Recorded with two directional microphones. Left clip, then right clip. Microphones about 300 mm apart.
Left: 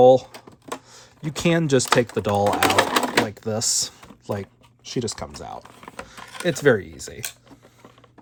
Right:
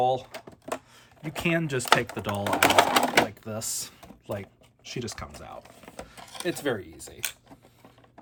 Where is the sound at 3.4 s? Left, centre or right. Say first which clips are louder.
Left 10 dB; left.